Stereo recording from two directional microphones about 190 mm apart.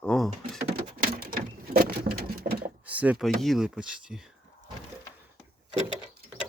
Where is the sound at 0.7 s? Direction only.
50° right (ahead or behind).